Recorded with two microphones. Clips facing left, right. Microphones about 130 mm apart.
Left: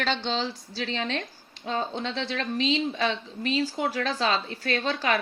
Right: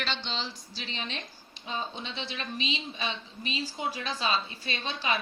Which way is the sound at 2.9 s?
85° left.